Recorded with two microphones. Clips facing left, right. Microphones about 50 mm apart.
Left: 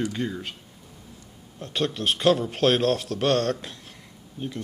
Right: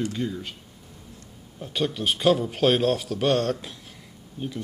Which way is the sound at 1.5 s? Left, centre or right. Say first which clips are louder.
Even; centre.